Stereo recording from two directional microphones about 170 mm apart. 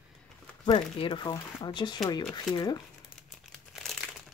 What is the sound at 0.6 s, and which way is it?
Speech, 30° left (ahead or behind).